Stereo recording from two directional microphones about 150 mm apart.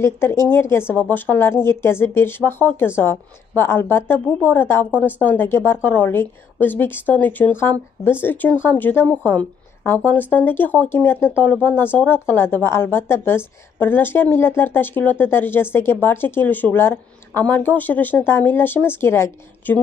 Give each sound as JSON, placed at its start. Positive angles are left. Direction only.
{"t": 0.0, "sound": "speech", "side_deg": 15}